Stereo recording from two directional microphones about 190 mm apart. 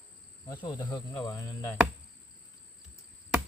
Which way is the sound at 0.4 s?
20° left (ahead or behind).